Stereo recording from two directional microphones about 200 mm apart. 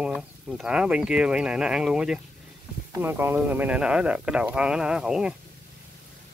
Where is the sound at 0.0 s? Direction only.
5° right (ahead or behind).